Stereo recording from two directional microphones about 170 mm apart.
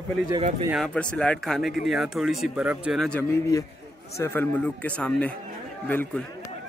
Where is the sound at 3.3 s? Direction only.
20° left (ahead or behind).